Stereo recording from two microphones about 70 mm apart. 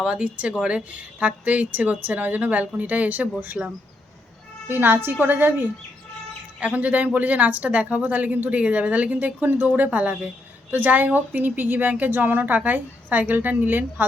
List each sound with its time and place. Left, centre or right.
0.0 s a woman's voice: centre
4.7 s a woman's voice: right
6.6 s a woman's voice: centre